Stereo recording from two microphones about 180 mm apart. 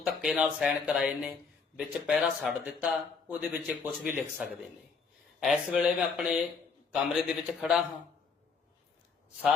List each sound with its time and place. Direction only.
0.0 s a man's voice: 5° right (ahead or behind)